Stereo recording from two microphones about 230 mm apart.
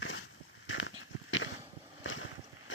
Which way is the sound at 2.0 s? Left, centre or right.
Left.